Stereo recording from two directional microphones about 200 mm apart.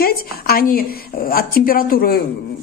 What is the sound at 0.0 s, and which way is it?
A woman's voice, 50° left (ahead or behind).